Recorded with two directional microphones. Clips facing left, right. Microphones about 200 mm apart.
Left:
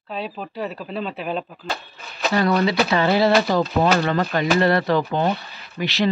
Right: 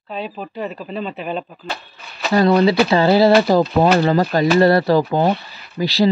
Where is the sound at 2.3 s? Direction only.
30° right (ahead or behind).